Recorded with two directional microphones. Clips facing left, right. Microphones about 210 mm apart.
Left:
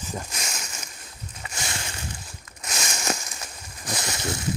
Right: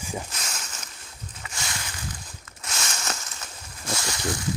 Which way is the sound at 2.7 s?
15° left (ahead or behind).